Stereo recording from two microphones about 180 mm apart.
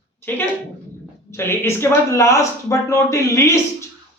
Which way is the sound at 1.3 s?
15° left (ahead or behind).